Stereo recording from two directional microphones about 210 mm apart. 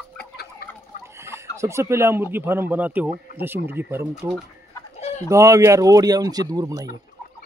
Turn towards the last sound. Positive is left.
turn(degrees=-15)  # may be behind; listen again after turning